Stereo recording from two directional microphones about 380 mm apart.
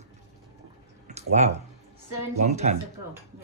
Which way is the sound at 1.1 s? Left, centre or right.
Centre.